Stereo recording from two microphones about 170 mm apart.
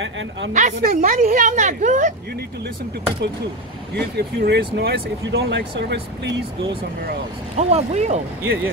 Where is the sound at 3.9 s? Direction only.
75° right (ahead or behind).